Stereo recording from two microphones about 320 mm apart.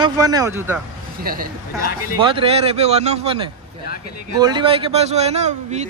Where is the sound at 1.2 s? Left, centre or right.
Right.